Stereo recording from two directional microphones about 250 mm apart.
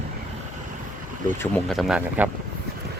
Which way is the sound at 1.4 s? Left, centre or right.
Centre.